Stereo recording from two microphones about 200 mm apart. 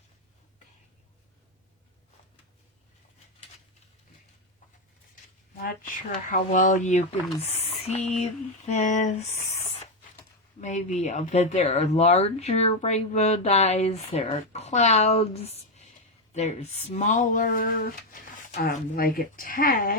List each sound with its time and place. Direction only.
5.5 s speech: 45° left (ahead or behind)
7.4 s a sound: 30° left (ahead or behind)
10.6 s speech: 35° left (ahead or behind)